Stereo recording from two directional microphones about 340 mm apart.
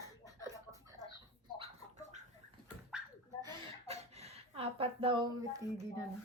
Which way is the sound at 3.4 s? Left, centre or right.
Centre.